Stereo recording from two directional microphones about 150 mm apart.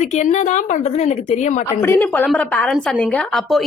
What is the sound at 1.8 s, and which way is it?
A woman's voice, 15° left (ahead or behind).